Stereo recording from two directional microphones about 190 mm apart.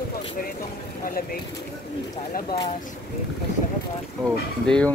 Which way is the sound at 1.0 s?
50° left (ahead or behind).